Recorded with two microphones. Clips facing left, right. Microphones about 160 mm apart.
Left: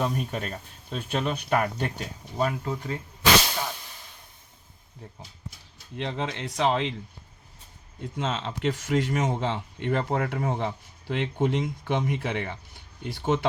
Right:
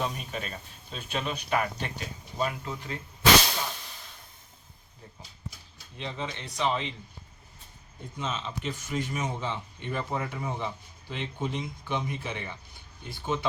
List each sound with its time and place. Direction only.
0.0 s speech: 50° left (ahead or behind)
6.0 s speech: 75° left (ahead or behind)
8.1 s speech: 85° left